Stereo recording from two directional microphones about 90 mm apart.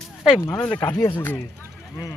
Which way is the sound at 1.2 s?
25° left (ahead or behind).